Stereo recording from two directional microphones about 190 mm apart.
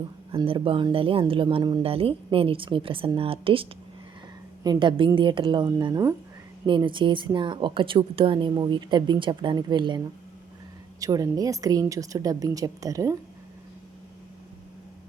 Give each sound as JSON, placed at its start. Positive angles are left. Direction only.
{"t": 0.3, "sound": "speech", "side_deg": -30}
{"t": 11.0, "sound": "a woman's voice", "side_deg": -20}